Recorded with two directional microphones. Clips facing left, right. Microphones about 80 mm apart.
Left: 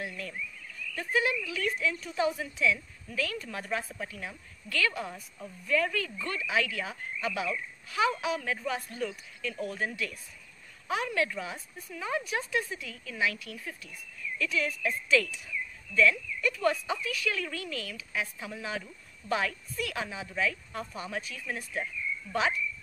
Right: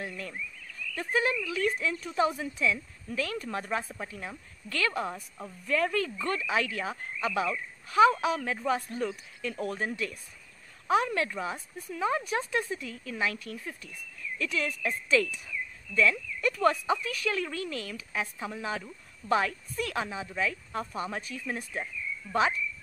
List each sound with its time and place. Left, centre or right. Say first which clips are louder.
0.0 s frog: even; right
0.9 s speech: right 1 dB; right
9.6 s speech: right 1 dB; right
10.9 s speech: right 4 dB; right